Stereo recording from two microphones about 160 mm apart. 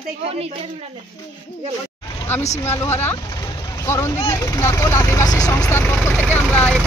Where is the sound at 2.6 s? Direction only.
15° left (ahead or behind).